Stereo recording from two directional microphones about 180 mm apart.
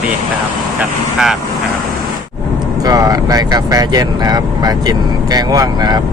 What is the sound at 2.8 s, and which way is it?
Speech, 20° right (ahead or behind).